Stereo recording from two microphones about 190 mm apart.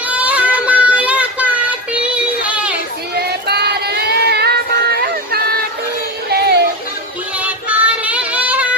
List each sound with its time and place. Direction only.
0.1 s child singing: 5° right (ahead or behind)
3.2 s child singing: 55° right (ahead or behind)
6.3 s music: 60° right (ahead or behind)
7.3 s child singing: 5° right (ahead or behind)